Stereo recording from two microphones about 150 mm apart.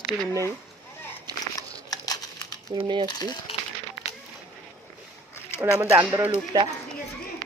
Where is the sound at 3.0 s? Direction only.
25° left (ahead or behind).